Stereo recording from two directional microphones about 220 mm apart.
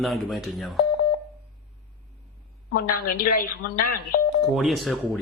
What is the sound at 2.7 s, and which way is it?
Speech, 40° left (ahead or behind).